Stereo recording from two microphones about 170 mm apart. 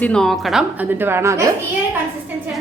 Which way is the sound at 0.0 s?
5° left (ahead or behind).